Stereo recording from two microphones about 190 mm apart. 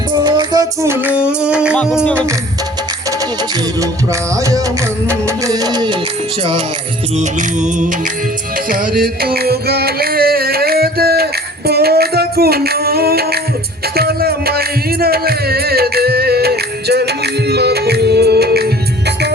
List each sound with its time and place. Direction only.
0.3 s music: 20° right (ahead or behind); by 2.2 s centre (ahead or behind)
3.8 s music: 15° right (ahead or behind)
7.2 s music: 40° right (ahead or behind); by 19.3 s 60° right (ahead or behind)